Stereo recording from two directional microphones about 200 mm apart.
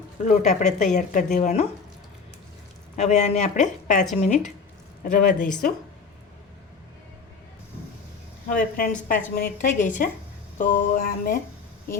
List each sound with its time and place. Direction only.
0.3 s a woman's voice: 35° left (ahead or behind)
2.9 s a woman's voice: 35° left (ahead or behind)
8.4 s a woman's voice: 45° left (ahead or behind)